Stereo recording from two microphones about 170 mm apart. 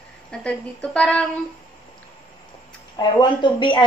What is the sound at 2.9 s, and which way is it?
Speech, 25° left (ahead or behind).